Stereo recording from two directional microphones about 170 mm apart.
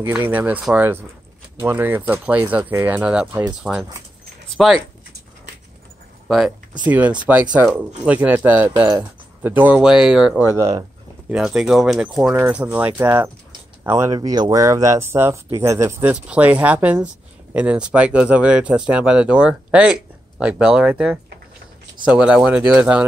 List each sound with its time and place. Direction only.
0.0 s speech: 10° right (ahead or behind)
6.2 s speech: 5° right (ahead or behind)
10.5 s a sound: 15° right (ahead or behind)
11.3 s speech: 5° right (ahead or behind)